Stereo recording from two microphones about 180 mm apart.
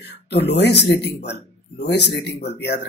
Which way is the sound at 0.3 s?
70° left (ahead or behind).